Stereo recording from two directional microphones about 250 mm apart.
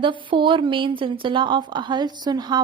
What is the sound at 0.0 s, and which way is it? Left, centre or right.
A woman's voice, centre.